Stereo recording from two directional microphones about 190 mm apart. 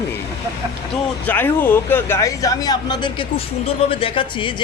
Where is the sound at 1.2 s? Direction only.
10° left (ahead or behind).